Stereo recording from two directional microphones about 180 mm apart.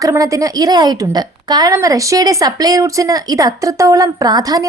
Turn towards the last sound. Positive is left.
turn(degrees=-20)  # may be behind; listen again after turning